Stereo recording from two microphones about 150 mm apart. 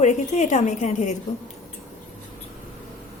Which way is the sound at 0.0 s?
55° left (ahead or behind).